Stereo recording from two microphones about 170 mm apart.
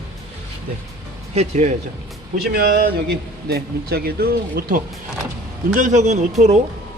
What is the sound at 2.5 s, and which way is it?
Speech, 60° right (ahead or behind).